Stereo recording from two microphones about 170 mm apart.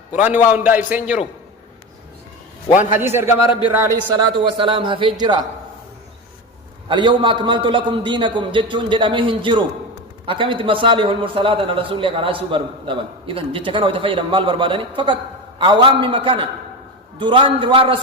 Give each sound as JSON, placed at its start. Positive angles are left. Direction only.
{"t": 0.1, "sound": "a man's voice", "side_deg": -10}
{"t": 3.0, "sound": "a man's voice", "side_deg": -15}
{"t": 3.4, "sound": "speech", "side_deg": 30}
{"t": 3.7, "sound": "a man's voice", "side_deg": -15}
{"t": 4.1, "sound": "a man's voice", "side_deg": -25}
{"t": 6.8, "sound": "a man's voice", "side_deg": -30}